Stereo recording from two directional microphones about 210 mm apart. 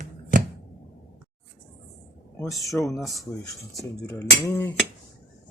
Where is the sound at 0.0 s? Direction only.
40° right (ahead or behind).